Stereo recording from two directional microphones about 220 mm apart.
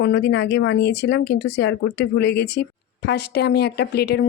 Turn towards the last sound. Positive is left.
turn(degrees=45)  # may be behind; listen again after turning